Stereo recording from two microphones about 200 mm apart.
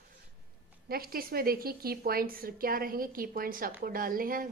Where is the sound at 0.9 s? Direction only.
50° right (ahead or behind).